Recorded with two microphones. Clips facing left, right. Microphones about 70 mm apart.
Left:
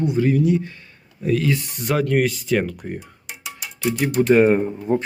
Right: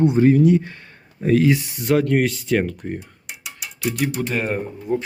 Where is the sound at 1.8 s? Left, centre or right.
Centre.